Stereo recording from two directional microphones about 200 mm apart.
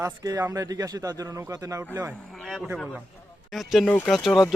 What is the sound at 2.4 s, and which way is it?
Speech, centre (ahead or behind).